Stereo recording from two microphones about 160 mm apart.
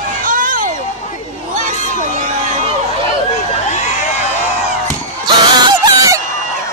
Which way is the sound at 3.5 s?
45° left (ahead or behind).